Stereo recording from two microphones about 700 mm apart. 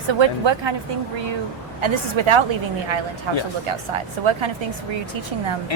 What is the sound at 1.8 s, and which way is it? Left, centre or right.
A woman's voice, right.